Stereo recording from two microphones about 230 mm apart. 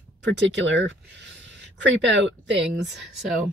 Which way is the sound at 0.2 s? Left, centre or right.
Right.